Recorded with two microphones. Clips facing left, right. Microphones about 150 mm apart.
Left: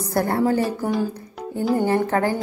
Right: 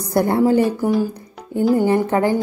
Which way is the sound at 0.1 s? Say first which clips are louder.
Right 5 dB; 20° right (ahead or behind).